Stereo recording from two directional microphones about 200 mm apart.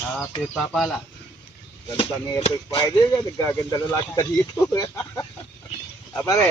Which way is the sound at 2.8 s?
15° left (ahead or behind).